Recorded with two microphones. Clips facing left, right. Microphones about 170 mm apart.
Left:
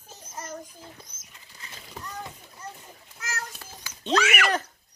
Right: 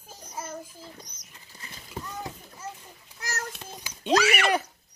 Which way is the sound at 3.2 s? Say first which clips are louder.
Right 1 dB; 40° right (ahead or behind).